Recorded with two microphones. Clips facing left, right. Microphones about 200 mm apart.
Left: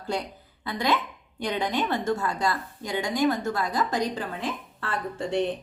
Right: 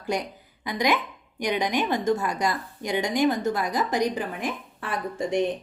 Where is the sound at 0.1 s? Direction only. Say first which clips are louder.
Right 2 dB; 15° right (ahead or behind).